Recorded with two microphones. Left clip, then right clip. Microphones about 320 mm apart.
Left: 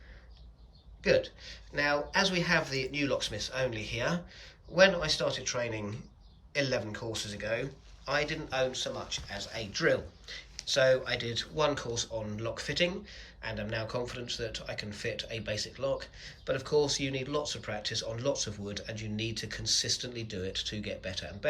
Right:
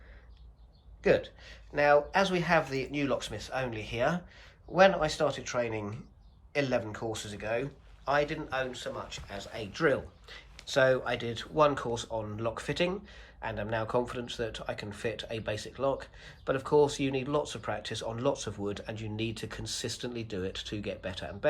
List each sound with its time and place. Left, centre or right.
1.0 s a man's voice: centre